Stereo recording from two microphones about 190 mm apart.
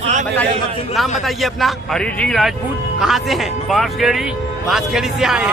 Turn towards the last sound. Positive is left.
turn(degrees=-5)  # may be behind; listen again after turning